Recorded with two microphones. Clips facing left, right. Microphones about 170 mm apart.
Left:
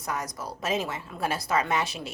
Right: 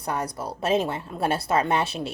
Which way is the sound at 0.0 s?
30° right (ahead or behind).